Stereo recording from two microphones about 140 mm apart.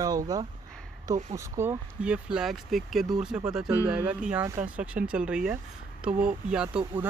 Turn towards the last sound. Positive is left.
turn(degrees=-5)  # may be behind; listen again after turning